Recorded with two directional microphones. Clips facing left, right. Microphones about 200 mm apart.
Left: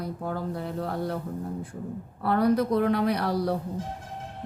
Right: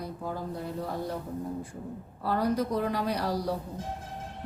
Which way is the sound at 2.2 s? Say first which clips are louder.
Left 5 dB; 60° left (ahead or behind).